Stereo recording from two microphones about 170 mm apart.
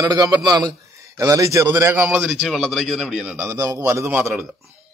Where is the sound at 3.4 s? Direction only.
20° right (ahead or behind).